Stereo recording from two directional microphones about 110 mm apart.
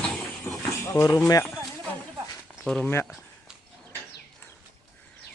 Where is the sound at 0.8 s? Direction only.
25° left (ahead or behind).